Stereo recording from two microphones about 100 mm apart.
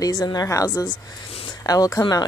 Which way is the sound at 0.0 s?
40° left (ahead or behind).